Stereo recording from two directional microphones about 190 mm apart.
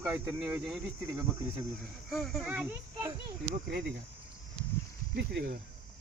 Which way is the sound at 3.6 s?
60° right (ahead or behind).